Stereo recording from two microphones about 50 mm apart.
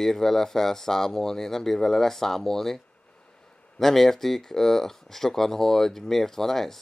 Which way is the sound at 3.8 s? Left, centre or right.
Centre.